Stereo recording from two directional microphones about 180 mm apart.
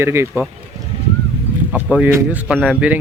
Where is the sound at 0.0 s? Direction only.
15° right (ahead or behind).